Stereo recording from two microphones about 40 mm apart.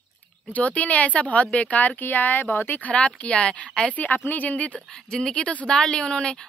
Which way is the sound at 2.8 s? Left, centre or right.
Left.